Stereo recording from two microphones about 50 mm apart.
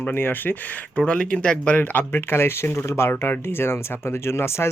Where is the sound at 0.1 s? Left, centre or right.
Left.